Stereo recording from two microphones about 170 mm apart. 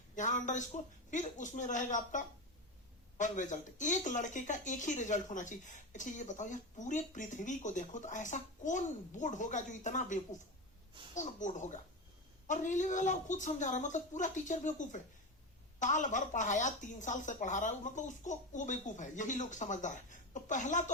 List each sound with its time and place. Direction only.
0.2 s speech: 45° left (ahead or behind)